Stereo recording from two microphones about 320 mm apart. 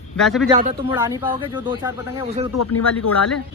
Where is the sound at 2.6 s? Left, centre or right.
Left.